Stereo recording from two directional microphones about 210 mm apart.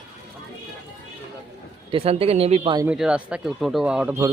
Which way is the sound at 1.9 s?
30° right (ahead or behind).